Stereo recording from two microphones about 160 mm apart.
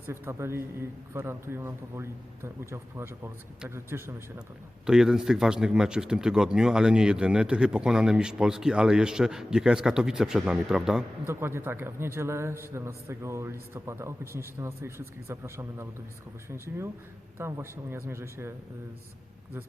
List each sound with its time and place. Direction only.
0.0 s a man's voice: 15° right (ahead or behind)
4.9 s speech: 5° right (ahead or behind)
11.3 s a man's voice: 15° right (ahead or behind)